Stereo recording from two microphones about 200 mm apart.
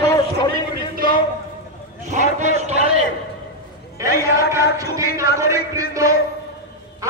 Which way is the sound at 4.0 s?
15° right (ahead or behind).